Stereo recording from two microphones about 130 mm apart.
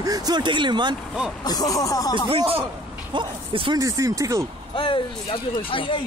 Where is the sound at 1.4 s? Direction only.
30° left (ahead or behind).